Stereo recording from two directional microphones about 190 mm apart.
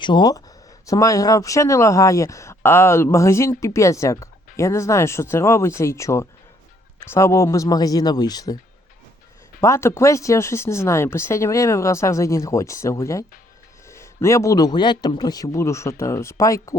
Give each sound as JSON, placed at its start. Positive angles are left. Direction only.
{"t": 0.0, "sound": "speech", "side_deg": 25}
{"t": 9.6, "sound": "speech", "side_deg": 15}